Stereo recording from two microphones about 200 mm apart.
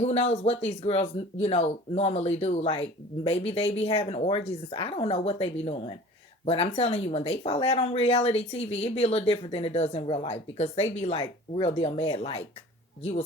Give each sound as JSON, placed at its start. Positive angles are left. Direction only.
{"t": 0.0, "sound": "speech", "side_deg": 30}